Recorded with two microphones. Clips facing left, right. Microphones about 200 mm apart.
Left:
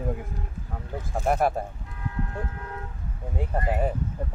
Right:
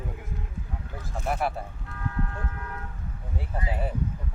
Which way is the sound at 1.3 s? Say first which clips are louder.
Left 5 dB; 45° left (ahead or behind).